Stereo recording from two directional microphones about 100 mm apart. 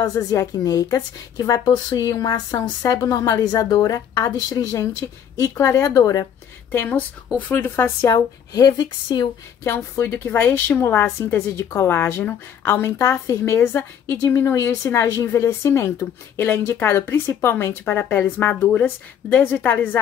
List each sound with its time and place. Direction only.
0.0 s a woman's voice: 35° left (ahead or behind)
6.7 s a woman's voice: 20° left (ahead or behind)
8.1 s speech: 45° left (ahead or behind)
9.6 s a woman's voice: 25° left (ahead or behind)